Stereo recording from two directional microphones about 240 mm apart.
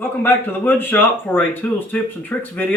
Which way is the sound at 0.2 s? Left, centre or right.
Centre.